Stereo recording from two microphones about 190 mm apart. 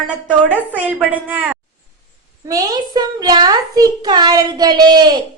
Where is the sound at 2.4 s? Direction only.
20° right (ahead or behind).